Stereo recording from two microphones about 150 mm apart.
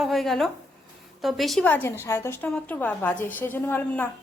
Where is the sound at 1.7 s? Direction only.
15° left (ahead or behind).